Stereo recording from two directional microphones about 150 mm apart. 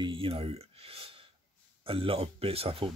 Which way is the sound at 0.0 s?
35° right (ahead or behind).